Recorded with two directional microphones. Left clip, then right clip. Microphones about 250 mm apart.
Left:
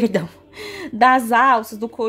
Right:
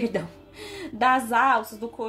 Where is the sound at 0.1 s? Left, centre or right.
Left.